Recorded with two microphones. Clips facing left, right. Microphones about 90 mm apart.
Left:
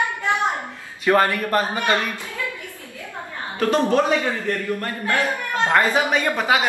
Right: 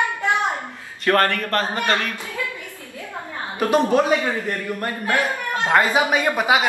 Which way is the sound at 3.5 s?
15° right (ahead or behind).